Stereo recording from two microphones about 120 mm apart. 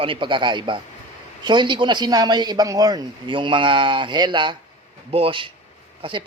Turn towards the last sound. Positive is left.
turn(degrees=-45)  # may be behind; listen again after turning